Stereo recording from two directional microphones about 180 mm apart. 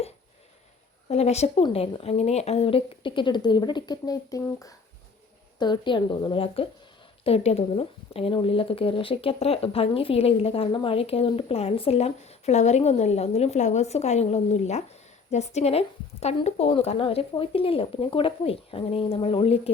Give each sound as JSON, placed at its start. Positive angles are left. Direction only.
{"t": 1.0, "sound": "a woman's voice", "side_deg": 35}